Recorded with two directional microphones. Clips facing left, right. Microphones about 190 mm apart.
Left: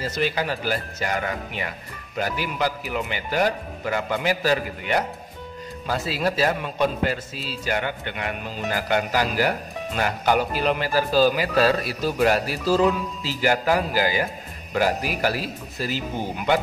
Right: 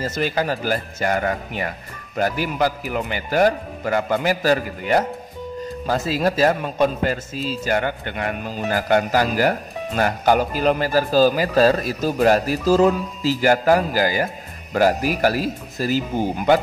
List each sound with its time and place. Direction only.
0.0 s a man's voice: 45° right (ahead or behind)